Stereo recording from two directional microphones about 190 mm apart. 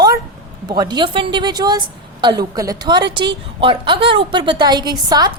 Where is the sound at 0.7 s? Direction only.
20° right (ahead or behind).